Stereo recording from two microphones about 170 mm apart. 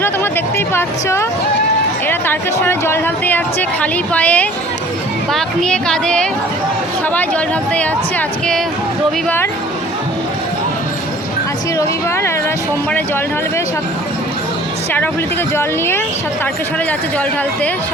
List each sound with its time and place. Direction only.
0.0 s a woman's voice: 15° left (ahead or behind)
11.8 s a woman's voice: 15° left (ahead or behind)